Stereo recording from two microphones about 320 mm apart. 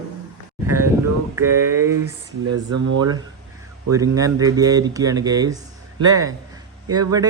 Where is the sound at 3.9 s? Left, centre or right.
Centre.